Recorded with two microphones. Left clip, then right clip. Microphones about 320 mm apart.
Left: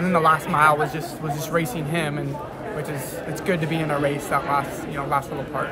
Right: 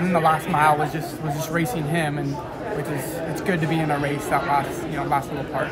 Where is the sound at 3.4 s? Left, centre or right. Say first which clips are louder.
Even; centre.